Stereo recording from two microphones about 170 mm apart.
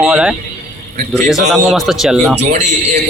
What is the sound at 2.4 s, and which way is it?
Speech, 40° right (ahead or behind).